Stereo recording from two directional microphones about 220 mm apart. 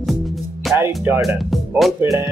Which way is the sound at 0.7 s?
10° right (ahead or behind).